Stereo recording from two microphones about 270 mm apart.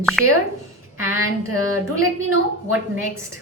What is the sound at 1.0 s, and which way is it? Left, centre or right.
A woman's voice, right.